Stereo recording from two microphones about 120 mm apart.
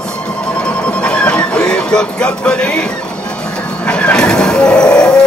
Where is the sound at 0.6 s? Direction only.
10° left (ahead or behind).